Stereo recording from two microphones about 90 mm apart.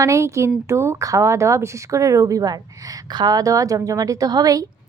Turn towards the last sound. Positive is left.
turn(degrees=-40)  # may be behind; listen again after turning